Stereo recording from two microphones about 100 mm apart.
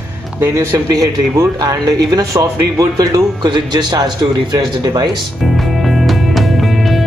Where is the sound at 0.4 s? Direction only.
25° right (ahead or behind).